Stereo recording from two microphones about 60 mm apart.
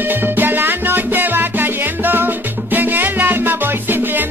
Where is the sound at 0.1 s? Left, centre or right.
Right.